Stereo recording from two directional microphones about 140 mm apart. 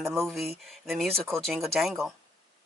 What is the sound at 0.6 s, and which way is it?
Speech, centre (ahead or behind).